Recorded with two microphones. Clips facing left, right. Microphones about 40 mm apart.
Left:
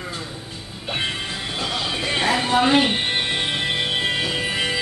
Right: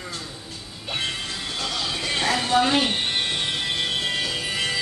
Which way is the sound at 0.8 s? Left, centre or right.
Centre.